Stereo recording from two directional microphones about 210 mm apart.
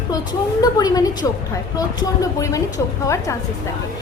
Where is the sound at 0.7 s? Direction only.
20° left (ahead or behind).